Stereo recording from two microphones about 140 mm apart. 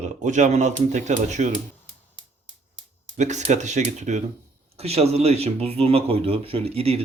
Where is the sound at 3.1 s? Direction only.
55° right (ahead or behind).